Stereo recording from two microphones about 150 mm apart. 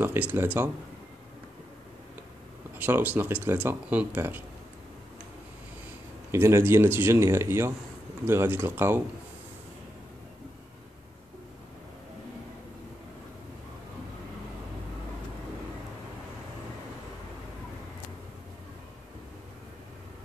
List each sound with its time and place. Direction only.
0.0 s speech: 15° right (ahead or behind)
2.8 s speech: 10° right (ahead or behind)
6.3 s speech: 15° right (ahead or behind)